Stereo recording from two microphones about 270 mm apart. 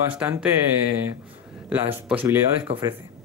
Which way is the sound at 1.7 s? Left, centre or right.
Centre.